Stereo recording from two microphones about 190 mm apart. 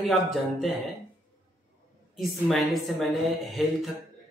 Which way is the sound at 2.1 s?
Centre (ahead or behind).